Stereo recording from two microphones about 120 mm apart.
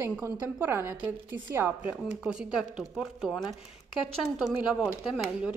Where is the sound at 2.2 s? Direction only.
5° right (ahead or behind).